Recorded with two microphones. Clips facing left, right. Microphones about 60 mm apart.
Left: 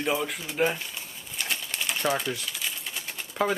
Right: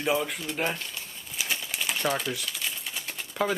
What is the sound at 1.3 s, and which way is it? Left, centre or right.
Typewriter, centre.